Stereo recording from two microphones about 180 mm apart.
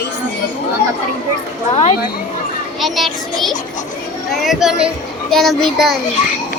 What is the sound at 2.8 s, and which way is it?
A child's voice, centre (ahead or behind).